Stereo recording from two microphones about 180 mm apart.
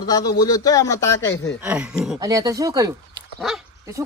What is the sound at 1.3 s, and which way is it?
Speech, 80° left.